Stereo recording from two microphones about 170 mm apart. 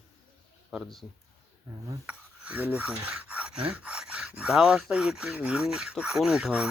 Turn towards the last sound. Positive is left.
turn(degrees=-5)  # may be behind; listen again after turning